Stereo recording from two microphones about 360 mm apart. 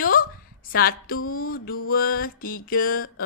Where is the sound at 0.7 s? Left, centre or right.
Left.